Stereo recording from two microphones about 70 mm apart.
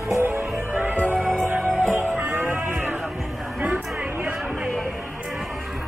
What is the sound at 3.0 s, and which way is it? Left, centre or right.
Music, centre.